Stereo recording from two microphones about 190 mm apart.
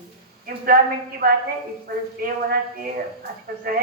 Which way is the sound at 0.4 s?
50° right (ahead or behind).